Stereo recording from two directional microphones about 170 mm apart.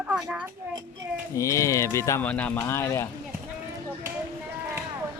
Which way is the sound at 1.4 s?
20° left (ahead or behind).